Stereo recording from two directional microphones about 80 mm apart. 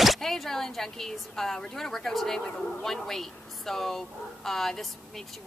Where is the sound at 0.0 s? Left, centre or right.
Centre.